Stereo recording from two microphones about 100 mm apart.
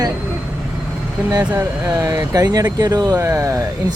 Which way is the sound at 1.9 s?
35° right (ahead or behind).